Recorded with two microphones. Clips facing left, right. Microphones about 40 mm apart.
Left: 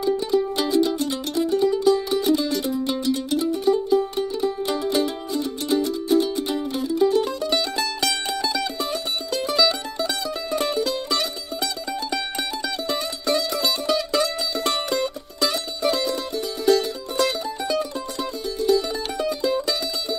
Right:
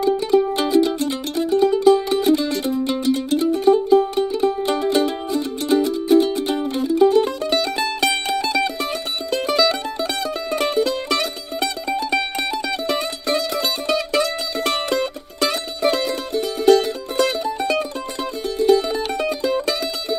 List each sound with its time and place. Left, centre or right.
0.7 s music: right
5.3 s music: right
7.0 s mandolin: right
13.5 s music: right